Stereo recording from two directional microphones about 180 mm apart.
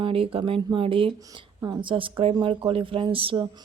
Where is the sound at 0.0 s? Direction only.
30° right (ahead or behind).